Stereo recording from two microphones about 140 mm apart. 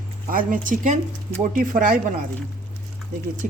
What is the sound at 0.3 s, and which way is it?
Speech, 80° right.